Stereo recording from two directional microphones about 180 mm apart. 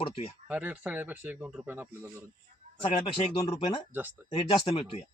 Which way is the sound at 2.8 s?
30° left (ahead or behind).